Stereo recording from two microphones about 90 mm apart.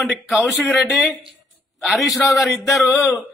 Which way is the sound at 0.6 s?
Centre (ahead or behind).